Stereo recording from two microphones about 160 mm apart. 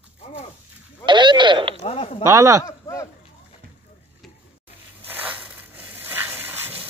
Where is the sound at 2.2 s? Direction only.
20° right (ahead or behind).